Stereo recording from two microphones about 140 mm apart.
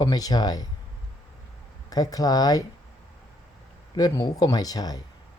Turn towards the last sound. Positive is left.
turn(degrees=25)  # may be behind; listen again after turning